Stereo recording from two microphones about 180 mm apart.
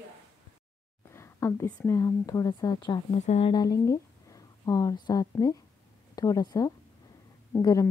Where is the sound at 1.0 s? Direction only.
15° left (ahead or behind).